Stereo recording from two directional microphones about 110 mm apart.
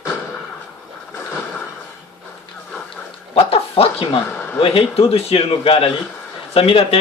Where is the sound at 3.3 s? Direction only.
65° left (ahead or behind).